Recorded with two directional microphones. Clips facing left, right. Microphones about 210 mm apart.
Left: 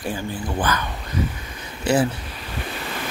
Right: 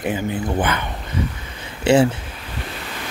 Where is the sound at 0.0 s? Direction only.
20° right (ahead or behind).